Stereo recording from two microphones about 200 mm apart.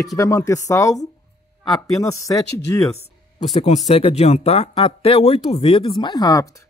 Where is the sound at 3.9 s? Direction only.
30° left (ahead or behind).